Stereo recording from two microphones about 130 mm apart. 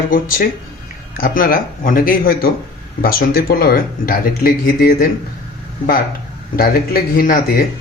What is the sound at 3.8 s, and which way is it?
Speech, 90° left.